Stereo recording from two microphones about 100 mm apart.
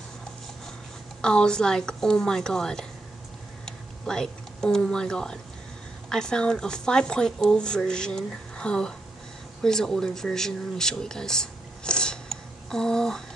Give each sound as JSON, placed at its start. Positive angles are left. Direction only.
{"t": 1.2, "sound": "speech", "side_deg": 10}
{"t": 3.6, "sound": "a sound", "side_deg": 5}
{"t": 6.0, "sound": "speech", "side_deg": 5}